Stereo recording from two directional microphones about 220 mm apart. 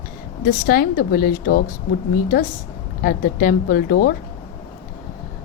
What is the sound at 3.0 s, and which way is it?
A woman's voice, 40° left (ahead or behind).